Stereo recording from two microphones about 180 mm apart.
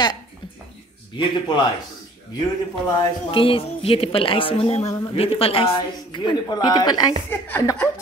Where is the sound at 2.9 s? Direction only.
30° left (ahead or behind).